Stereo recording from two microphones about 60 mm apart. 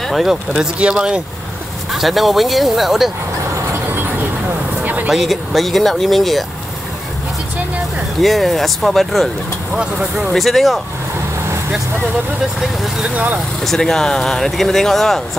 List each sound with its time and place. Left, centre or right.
0.0 s speech: centre
0.5 s speech: centre
1.9 s speech: centre
4.8 s a sound: right
5.1 s speech: centre
8.2 s speech: centre
9.8 s speech: centre
10.3 s speech: centre
13.0 s speech: right
13.6 s speech: centre